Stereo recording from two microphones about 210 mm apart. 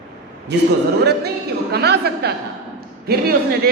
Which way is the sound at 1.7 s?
50° right (ahead or behind).